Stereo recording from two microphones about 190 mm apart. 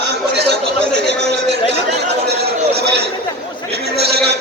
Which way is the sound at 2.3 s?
60° right (ahead or behind).